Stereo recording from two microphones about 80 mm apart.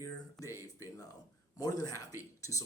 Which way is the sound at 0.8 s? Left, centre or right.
Left.